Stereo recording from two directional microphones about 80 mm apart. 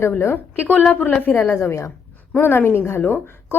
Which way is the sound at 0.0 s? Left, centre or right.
Left.